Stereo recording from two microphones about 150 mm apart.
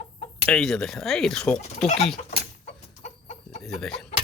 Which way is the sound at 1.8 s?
45° left (ahead or behind).